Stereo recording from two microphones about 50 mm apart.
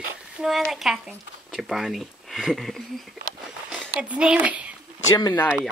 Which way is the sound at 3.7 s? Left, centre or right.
Right.